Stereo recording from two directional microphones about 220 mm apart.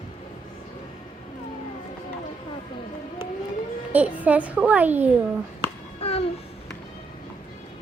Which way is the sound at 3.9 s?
5° right (ahead or behind).